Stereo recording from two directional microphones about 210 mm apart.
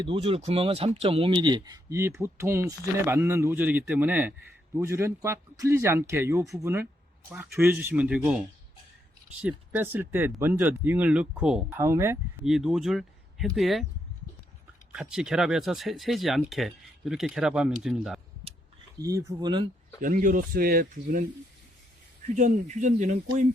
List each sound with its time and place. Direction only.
0.0 s speech: 25° right (ahead or behind)
12.5 s speech: centre (ahead or behind)
14.9 s speech: 5° right (ahead or behind)
18.9 s speech: 15° right (ahead or behind)
20.0 s speech: 40° right (ahead or behind)
22.4 s speech: 35° right (ahead or behind)